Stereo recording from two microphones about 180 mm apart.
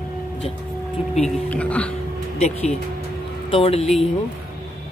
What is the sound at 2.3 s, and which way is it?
Speech, 35° left (ahead or behind).